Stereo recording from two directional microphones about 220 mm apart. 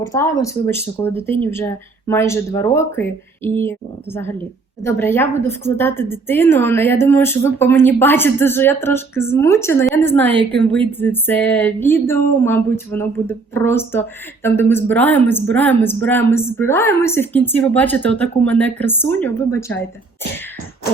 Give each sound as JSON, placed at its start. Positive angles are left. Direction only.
{"t": 0.1, "sound": "a woman's voice", "side_deg": 15}